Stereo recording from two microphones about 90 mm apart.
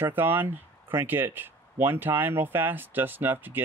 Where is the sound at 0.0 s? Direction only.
20° right (ahead or behind).